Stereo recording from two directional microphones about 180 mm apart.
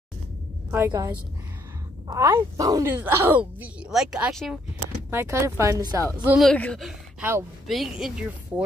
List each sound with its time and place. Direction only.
0.7 s a woman's voice: 15° right (ahead or behind)
5.1 s speech: 15° right (ahead or behind)
6.2 s speech: 5° right (ahead or behind)